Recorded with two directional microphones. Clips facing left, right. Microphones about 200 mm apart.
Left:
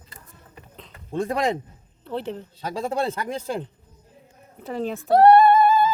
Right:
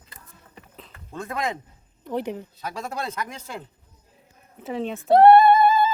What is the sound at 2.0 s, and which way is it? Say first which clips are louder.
Speech: right 1 dB; 15° right (ahead or behind).